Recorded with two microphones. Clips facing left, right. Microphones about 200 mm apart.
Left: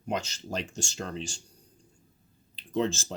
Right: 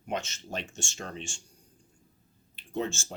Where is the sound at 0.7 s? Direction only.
35° left (ahead or behind).